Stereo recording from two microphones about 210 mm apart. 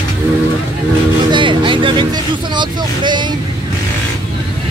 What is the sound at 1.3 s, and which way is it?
Vehicle, 25° right (ahead or behind).